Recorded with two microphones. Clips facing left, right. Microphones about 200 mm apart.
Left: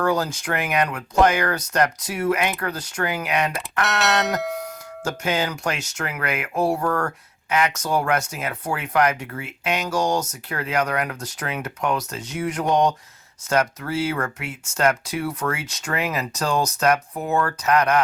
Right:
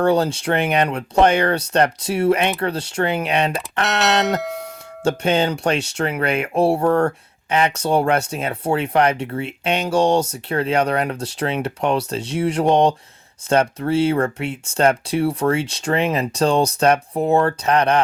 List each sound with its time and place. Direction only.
0.0 s speech: 30° right (ahead or behind)
3.8 s a sound: centre (ahead or behind)
4.4 s music: centre (ahead or behind)
5.0 s speech: 30° right (ahead or behind)